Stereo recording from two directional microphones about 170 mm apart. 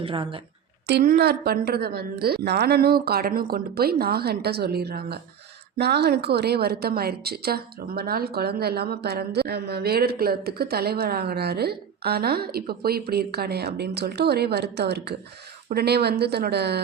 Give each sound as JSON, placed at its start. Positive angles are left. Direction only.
{"t": 0.0, "sound": "a woman's voice", "side_deg": -30}
{"t": 0.9, "sound": "a woman's voice", "side_deg": -65}